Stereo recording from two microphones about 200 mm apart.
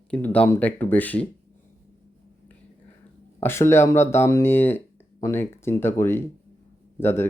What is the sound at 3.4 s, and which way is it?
Speech, 15° left (ahead or behind).